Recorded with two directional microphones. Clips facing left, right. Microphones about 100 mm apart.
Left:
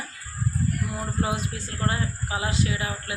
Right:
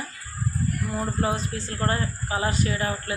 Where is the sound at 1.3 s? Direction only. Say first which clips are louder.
Right 2 dB; 10° left (ahead or behind).